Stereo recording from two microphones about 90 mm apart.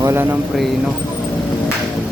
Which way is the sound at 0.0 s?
25° right (ahead or behind).